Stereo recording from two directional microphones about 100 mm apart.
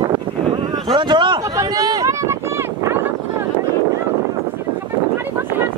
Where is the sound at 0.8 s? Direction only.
50° right (ahead or behind).